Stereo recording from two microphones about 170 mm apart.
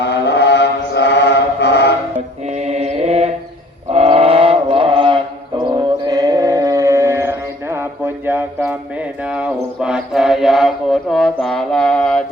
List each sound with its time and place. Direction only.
0.0 s mantra: 90° left
2.6 s mantra: 40° right (ahead or behind)
3.9 s chant: 35° right (ahead or behind); by 8.7 s 10° right (ahead or behind)
9.8 s mantra: 5° right (ahead or behind)